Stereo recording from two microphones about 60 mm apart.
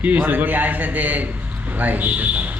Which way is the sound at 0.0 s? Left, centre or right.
Right.